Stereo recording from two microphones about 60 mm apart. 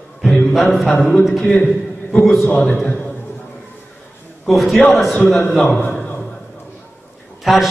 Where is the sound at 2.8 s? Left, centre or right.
Centre.